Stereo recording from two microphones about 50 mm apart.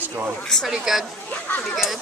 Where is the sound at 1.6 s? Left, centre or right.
Centre.